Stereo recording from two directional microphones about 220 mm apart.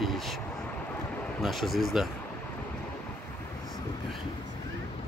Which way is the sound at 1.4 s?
Centre (ahead or behind).